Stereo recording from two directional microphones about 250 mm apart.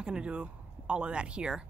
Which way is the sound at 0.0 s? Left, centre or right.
Centre.